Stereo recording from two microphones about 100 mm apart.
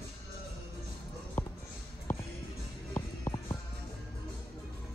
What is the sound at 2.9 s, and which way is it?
Music, 25° left (ahead or behind).